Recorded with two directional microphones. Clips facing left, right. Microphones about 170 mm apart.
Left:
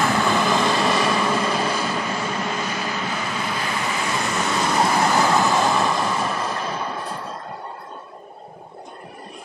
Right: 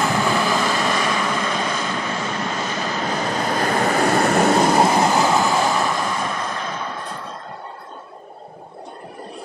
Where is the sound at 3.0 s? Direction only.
40° right (ahead or behind).